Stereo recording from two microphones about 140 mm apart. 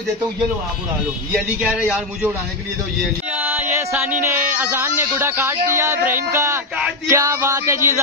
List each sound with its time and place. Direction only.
1.7 s a man's voice: 10° right (ahead or behind)
3.3 s a sound: 15° right (ahead or behind)
5.8 s speech: 15° right (ahead or behind)